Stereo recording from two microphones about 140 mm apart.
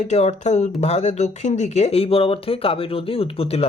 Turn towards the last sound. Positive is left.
turn(degrees=45)  # may be behind; listen again after turning